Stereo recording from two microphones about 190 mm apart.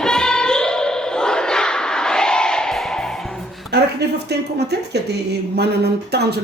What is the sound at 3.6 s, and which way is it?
Speech, 60° right (ahead or behind).